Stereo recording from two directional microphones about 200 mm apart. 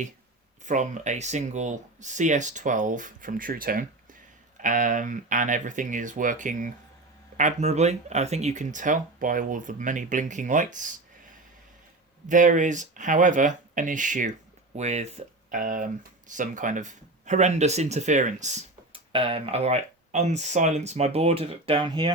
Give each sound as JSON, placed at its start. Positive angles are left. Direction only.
{"t": 0.6, "sound": "speech", "side_deg": -40}
{"t": 12.3, "sound": "speech", "side_deg": -40}